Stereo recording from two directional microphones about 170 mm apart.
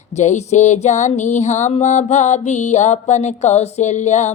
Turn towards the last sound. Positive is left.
turn(degrees=40)  # may be behind; listen again after turning